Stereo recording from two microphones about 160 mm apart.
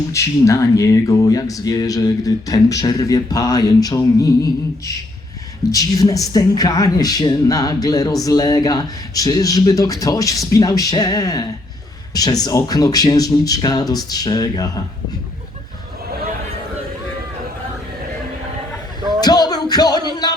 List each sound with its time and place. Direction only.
0.1 s speech: 20° left (ahead or behind)
19.2 s music: 25° left (ahead or behind)